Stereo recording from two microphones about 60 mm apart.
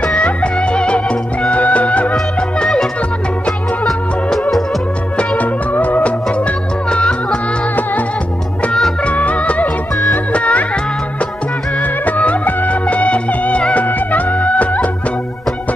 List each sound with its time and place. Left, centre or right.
0.1 s music: centre
2.6 s music: centre
5.1 s music: left
9.0 s music: left
11.8 s music: left